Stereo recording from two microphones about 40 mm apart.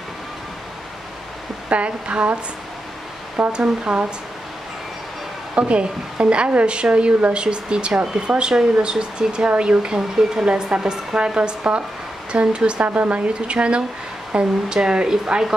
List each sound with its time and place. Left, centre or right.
1.7 s speech: right
3.5 s speech: right
5.5 s speech: right
12.8 s speech: right
13.3 s speech: right